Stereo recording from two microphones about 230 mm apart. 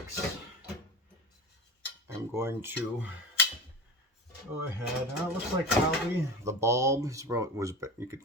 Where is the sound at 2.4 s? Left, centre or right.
Centre.